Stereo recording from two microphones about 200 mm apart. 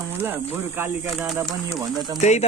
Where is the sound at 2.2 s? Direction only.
35° left (ahead or behind).